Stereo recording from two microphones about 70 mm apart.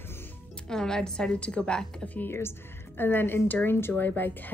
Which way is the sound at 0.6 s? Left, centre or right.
Centre.